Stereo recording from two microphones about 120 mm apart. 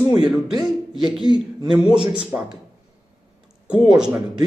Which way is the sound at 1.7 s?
5° right (ahead or behind).